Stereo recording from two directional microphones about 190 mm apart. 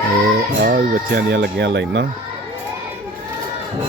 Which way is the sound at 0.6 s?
55° right (ahead or behind).